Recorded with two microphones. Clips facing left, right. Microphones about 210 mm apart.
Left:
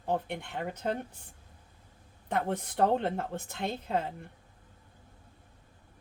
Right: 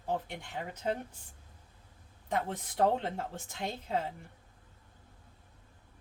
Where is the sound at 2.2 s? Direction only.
60° left (ahead or behind).